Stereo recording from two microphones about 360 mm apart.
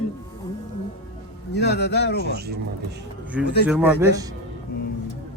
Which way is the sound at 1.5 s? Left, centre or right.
Left.